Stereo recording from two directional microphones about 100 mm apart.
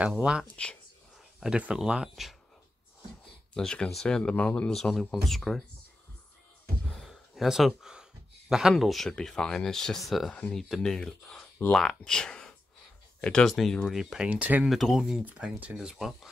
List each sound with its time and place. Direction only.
0.2 s speech: 10° right (ahead or behind)
3.5 s speech: 10° left (ahead or behind)
7.0 s speech: 5° right (ahead or behind)
14.3 s speech: 15° right (ahead or behind)
14.6 s speech: centre (ahead or behind)
15.2 s speech: 15° right (ahead or behind)